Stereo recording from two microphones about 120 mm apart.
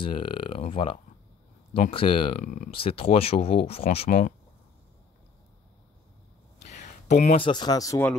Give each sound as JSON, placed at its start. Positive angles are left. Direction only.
{"t": 0.0, "sound": "speech", "side_deg": 45}
{"t": 2.7, "sound": "speech", "side_deg": 50}
{"t": 6.6, "sound": "a sound", "side_deg": 75}
{"t": 7.3, "sound": "speech", "side_deg": 40}